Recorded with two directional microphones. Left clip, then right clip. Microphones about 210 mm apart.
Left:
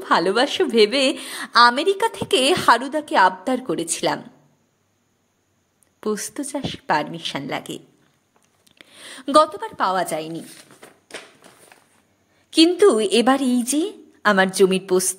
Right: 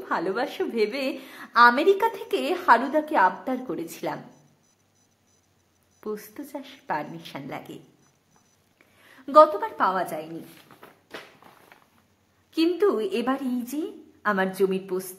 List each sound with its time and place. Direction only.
0.0 s a woman's voice: 40° left (ahead or behind)
5.9 s a woman's voice: 40° left (ahead or behind)
8.7 s a woman's voice: 50° left (ahead or behind)
12.4 s a woman's voice: 35° left (ahead or behind)